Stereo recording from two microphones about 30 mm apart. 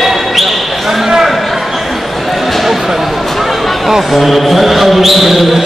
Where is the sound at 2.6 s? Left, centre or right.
Centre.